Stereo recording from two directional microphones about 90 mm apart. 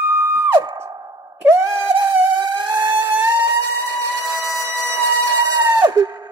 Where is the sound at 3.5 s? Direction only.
35° right (ahead or behind).